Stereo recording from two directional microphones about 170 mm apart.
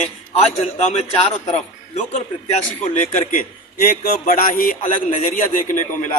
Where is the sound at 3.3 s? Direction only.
55° left (ahead or behind).